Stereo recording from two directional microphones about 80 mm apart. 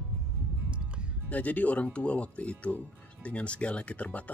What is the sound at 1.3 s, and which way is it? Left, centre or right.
Speech, centre.